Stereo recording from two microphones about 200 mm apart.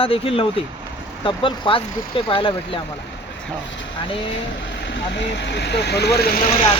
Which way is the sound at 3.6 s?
65° left (ahead or behind).